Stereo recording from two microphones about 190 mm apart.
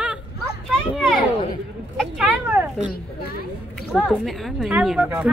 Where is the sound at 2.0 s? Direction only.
5° right (ahead or behind).